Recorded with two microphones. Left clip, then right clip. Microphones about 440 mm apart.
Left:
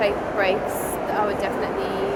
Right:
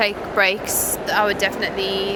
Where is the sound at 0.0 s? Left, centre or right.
Right.